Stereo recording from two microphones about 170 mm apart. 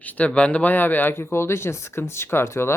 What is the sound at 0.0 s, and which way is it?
Speech, 10° left (ahead or behind).